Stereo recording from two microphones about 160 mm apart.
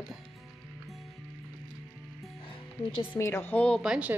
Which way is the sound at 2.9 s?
30° left (ahead or behind).